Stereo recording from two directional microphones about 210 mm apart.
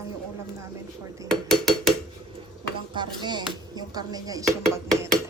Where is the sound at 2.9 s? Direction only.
20° right (ahead or behind).